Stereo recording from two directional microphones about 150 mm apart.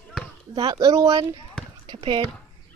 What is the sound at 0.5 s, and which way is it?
Speech, 30° right (ahead or behind).